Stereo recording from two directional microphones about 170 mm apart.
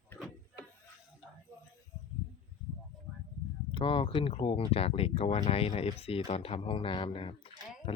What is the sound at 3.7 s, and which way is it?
Speech, 30° left (ahead or behind).